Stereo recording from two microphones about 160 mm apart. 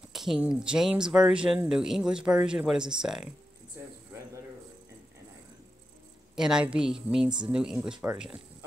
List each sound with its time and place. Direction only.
0.1 s speech: centre (ahead or behind)
3.8 s a sound: 15° right (ahead or behind)
6.3 s speech: 5° right (ahead or behind)